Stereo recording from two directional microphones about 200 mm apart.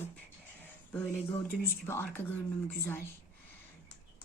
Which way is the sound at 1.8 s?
15° left (ahead or behind).